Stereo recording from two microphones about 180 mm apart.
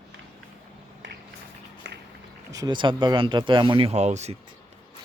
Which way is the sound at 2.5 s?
20° right (ahead or behind).